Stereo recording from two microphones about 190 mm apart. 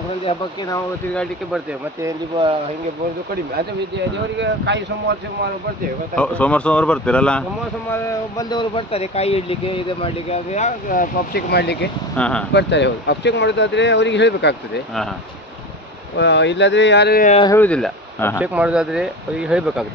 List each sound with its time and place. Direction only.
2.0 s speech: 25° right (ahead or behind)
4.4 s speech: 65° right (ahead or behind)
6.1 s speech: 5° left (ahead or behind)
7.9 s speech: 20° left (ahead or behind); by 11.9 s 60° left (ahead or behind)
12.2 s speech: 5° left (ahead or behind)
12.5 s speech: 65° left (ahead or behind)
16.2 s speech: 65° left (ahead or behind)
17.6 s speech: 5° left (ahead or behind)
18.4 s speech: 5° right (ahead or behind)